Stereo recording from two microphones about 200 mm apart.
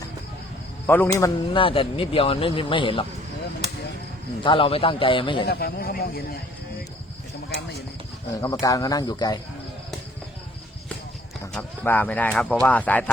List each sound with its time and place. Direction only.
0.9 s speech: 10° left (ahead or behind)
1.5 s speech: 25° left (ahead or behind)
4.4 s speech: 25° left (ahead or behind)
5.5 s a man's voice: 50° left (ahead or behind)
8.3 s speech: 15° left (ahead or behind)
11.5 s speech: 10° left (ahead or behind)